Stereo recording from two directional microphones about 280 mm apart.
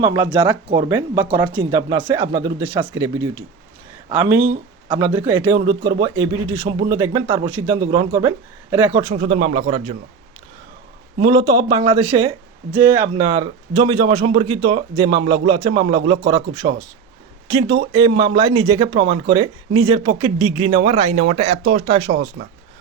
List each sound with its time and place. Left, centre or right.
0.0 s a man's voice: centre
11.2 s a man's voice: centre
18.2 s a man's voice: right